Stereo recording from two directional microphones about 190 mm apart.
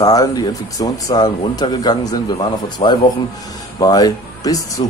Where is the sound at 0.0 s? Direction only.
20° left (ahead or behind).